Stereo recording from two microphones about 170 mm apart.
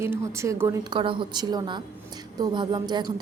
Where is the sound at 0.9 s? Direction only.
30° right (ahead or behind).